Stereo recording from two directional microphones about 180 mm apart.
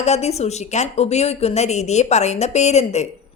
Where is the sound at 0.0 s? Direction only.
35° left (ahead or behind).